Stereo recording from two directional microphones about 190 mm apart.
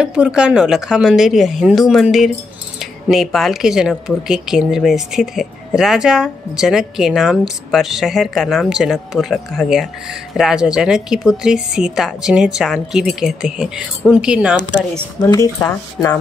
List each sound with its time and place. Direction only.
0.0 s speech: 5° right (ahead or behind)
15.2 s speech: 15° left (ahead or behind)